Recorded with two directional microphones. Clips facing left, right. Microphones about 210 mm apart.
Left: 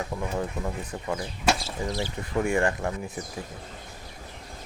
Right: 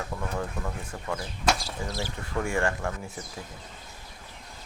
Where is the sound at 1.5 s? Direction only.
Centre (ahead or behind).